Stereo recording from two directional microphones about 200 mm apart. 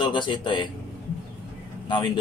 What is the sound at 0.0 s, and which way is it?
Speech, 25° left (ahead or behind).